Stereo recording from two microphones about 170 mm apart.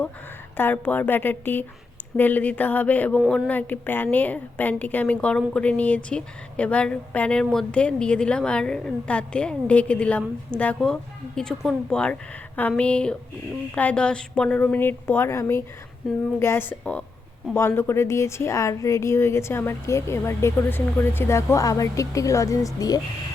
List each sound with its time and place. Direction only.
0.5 s a woman's voice: 10° left (ahead or behind)